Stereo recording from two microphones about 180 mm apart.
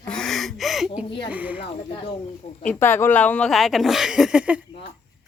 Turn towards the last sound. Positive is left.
turn(degrees=-5)  # may be behind; listen again after turning